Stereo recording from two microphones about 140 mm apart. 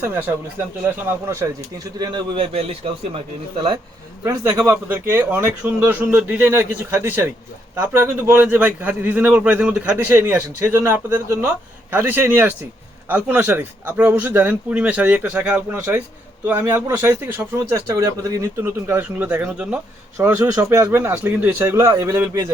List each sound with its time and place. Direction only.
0.0 s a man's voice: 15° right (ahead or behind)
2.3 s a man's voice: 45° right (ahead or behind)
4.2 s a man's voice: 15° right (ahead or behind)
10.1 s a man's voice: 20° right (ahead or behind)